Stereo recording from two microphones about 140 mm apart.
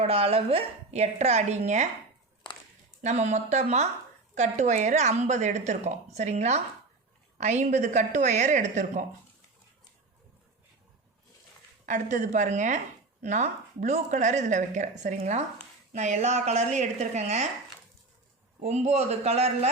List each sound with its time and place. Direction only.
0.0 s a woman's voice: 45° right (ahead or behind)
3.0 s a woman's voice: 55° right (ahead or behind)
11.9 s a woman's voice: 60° right (ahead or behind)
18.6 s a woman's voice: 50° right (ahead or behind)